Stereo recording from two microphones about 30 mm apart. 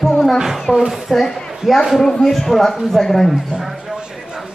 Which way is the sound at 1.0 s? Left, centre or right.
Centre.